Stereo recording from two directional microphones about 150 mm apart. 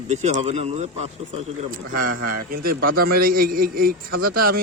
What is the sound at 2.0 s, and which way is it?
A man's voice, 75° right (ahead or behind).